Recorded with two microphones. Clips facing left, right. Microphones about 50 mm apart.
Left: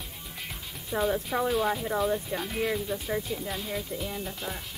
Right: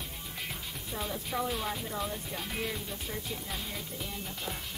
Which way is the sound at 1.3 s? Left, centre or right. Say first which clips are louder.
Left 1 dB; left.